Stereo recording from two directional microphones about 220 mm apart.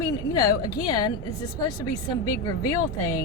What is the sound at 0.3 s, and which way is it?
Speech, 15° left (ahead or behind).